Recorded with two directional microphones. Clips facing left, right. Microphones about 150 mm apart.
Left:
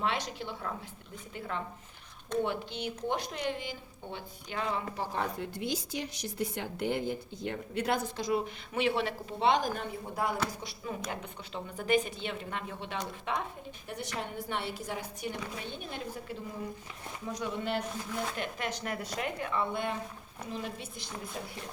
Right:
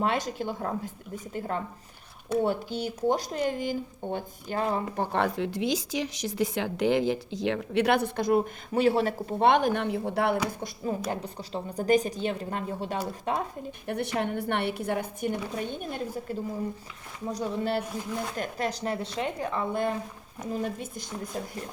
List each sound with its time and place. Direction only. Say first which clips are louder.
0.0 s speech: right 6 dB; 45° right (ahead or behind)
5.1 s speech: right 9 dB; 85° right
11.1 s speech: right 6 dB; 35° right (ahead or behind)
13.8 s speech: right 9 dB; 60° right (ahead or behind)
17.3 s speech: right 5 dB; 35° right (ahead or behind)